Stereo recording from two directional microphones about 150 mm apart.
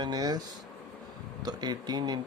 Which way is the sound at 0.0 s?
25° right (ahead or behind).